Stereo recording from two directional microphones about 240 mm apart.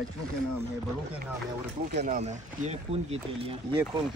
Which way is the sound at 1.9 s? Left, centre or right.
Right.